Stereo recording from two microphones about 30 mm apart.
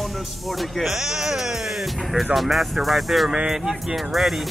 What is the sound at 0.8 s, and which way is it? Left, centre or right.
Speech, centre.